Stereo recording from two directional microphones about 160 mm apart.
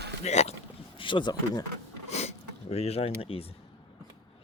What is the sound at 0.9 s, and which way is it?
Speech, 30° left (ahead or behind).